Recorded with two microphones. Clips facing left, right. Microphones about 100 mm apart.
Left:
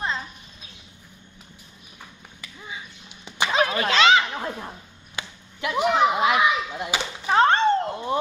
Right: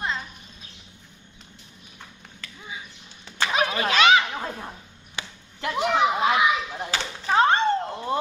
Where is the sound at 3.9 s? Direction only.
30° left (ahead or behind).